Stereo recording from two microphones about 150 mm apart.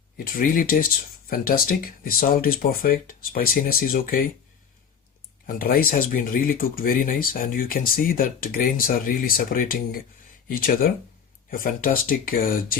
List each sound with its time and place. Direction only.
0.3 s speech: 70° left (ahead or behind)
5.5 s speech: 75° left (ahead or behind)